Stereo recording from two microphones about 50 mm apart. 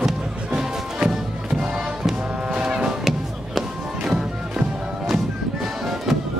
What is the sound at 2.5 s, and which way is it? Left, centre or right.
Music, right.